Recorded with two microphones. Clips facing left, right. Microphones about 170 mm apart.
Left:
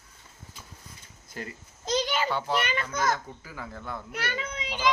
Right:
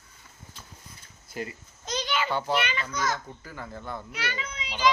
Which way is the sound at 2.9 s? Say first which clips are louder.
Left 3 dB; 55° left (ahead or behind).